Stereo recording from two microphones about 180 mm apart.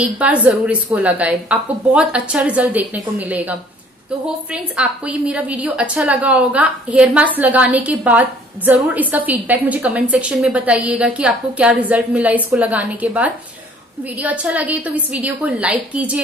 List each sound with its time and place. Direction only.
0.0 s a woman's voice: 10° right (ahead or behind)